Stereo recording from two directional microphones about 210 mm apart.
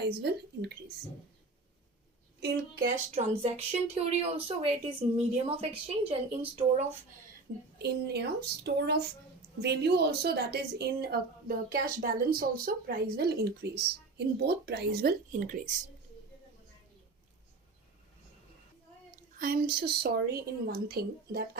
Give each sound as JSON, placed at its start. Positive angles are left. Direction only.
{"t": 0.0, "sound": "a woman's voice", "side_deg": -50}
{"t": 2.4, "sound": "a woman's voice", "side_deg": -40}
{"t": 3.4, "sound": "speech", "side_deg": -30}
{"t": 7.8, "sound": "a woman's voice", "side_deg": -50}
{"t": 19.4, "sound": "a woman's voice", "side_deg": -45}